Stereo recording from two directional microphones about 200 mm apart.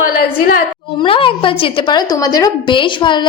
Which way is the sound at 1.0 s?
25° left (ahead or behind).